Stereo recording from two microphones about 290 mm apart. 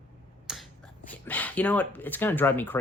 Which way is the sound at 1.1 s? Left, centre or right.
Centre.